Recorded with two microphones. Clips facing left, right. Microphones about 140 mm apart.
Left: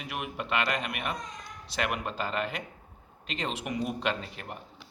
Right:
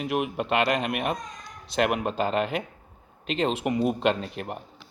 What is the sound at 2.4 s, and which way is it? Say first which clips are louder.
Speech: right 6 dB; 60° right (ahead or behind).